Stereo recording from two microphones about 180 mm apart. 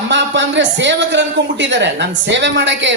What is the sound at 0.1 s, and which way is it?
A man's voice, 90° right.